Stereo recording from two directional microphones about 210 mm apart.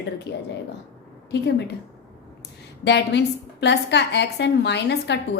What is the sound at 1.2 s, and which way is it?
Speech, 55° left (ahead or behind).